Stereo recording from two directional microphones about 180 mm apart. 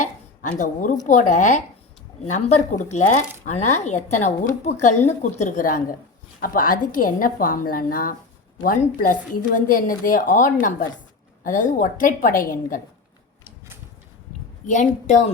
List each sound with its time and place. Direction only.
0.5 s a woman's voice: 45° left (ahead or behind)
14.7 s speech: 40° left (ahead or behind)